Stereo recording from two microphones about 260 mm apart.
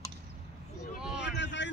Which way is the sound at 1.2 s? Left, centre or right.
Left.